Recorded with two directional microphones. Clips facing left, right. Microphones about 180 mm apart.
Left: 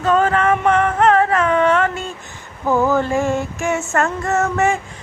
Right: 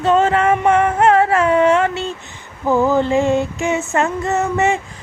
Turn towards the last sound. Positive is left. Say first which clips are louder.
# right 1 dB
turn(degrees=-20)  # may be behind; listen again after turning